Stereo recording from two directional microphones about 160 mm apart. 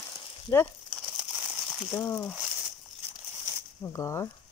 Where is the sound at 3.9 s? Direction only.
20° left (ahead or behind).